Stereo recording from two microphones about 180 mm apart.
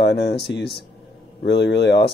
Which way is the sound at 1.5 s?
65° left (ahead or behind).